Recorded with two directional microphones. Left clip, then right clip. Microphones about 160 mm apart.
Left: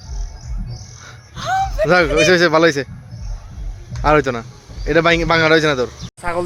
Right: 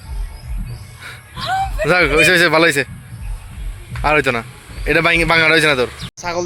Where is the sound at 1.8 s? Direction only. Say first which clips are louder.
Right 1 dB; 5° left (ahead or behind).